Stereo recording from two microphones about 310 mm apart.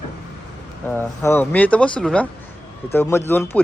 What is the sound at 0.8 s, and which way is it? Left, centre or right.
Speech, centre.